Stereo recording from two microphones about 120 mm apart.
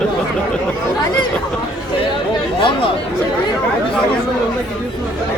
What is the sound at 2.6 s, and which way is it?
Chatter, 45° left (ahead or behind).